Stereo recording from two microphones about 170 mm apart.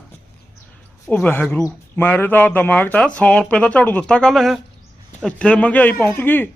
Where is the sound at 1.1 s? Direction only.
10° left (ahead or behind).